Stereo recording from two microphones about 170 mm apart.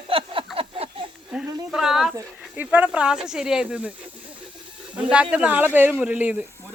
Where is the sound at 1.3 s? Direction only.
5° right (ahead or behind).